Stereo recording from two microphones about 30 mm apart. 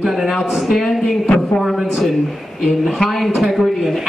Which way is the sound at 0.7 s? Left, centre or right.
Centre.